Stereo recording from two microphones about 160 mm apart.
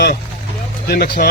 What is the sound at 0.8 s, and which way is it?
Speech, 75° left (ahead or behind).